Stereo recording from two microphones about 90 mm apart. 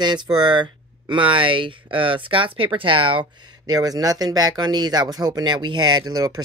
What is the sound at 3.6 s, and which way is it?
Speech, 45° right (ahead or behind).